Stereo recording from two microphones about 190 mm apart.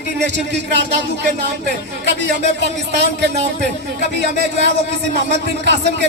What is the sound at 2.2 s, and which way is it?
Speech, 65° right (ahead or behind).